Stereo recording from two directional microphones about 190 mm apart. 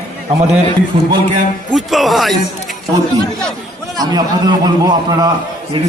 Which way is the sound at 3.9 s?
20° right (ahead or behind).